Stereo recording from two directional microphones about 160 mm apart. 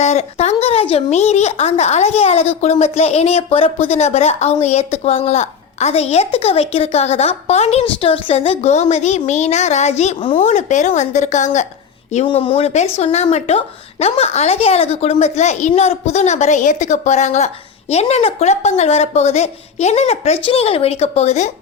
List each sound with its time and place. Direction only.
0.0 s a woman's voice: 45° left (ahead or behind)
12.2 s a woman's voice: 35° left (ahead or behind)